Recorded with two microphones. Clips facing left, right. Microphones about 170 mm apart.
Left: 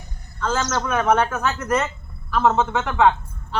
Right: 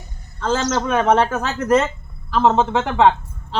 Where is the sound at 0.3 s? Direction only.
30° right (ahead or behind).